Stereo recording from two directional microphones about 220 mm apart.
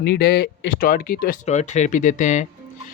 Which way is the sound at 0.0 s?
45° left (ahead or behind).